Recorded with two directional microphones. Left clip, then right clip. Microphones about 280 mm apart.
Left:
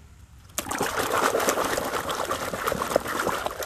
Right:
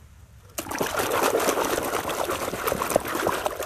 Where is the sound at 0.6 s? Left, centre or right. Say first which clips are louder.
Even; centre.